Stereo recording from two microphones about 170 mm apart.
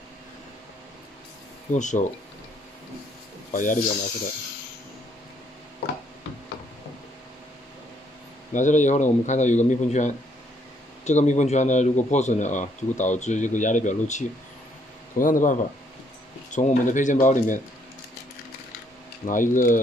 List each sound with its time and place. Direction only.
1.7 s speech: 45° left (ahead or behind)
3.5 s speech: 50° left (ahead or behind)
8.5 s speech: 45° left (ahead or behind)
19.2 s speech: 50° left (ahead or behind)